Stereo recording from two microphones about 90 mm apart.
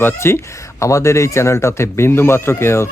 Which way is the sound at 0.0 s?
25° left (ahead or behind).